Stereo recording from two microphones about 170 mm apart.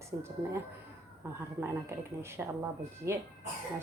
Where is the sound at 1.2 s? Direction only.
10° right (ahead or behind).